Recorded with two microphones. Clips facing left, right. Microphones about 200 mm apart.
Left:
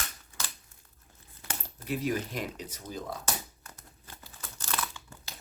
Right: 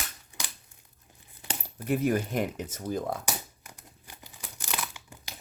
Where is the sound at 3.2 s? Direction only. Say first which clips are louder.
Right 1 dB; 15° right (ahead or behind).